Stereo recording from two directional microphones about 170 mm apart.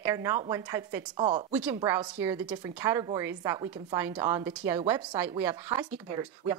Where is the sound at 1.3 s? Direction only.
30° right (ahead or behind).